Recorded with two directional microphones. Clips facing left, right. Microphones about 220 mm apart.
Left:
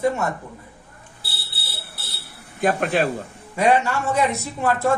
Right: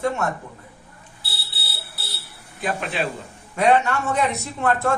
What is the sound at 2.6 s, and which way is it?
Speech, 50° left (ahead or behind).